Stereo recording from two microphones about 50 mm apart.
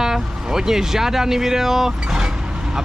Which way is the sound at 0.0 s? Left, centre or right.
Centre.